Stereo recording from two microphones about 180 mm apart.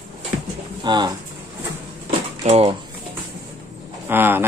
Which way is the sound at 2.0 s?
35° right (ahead or behind).